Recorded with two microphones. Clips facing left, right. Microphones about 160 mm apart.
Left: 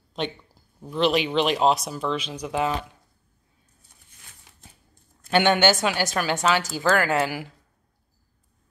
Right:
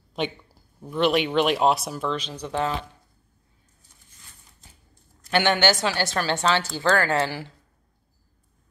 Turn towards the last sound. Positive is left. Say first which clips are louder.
# even
turn(degrees=10)  # may be behind; listen again after turning